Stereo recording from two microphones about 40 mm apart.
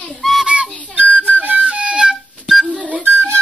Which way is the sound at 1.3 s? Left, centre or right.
Right.